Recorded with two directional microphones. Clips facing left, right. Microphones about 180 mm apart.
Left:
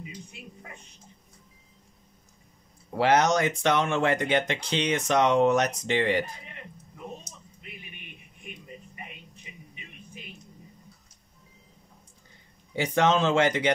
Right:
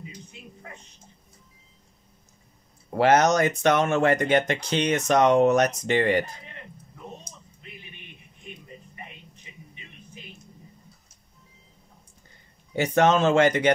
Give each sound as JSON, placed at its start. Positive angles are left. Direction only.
{"t": 3.0, "sound": "speech", "side_deg": -45}
{"t": 12.7, "sound": "speech", "side_deg": -50}